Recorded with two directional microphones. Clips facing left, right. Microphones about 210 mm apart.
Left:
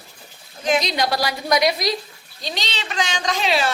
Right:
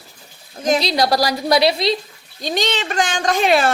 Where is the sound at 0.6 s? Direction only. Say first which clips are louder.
Right 3 dB; 35° right (ahead or behind).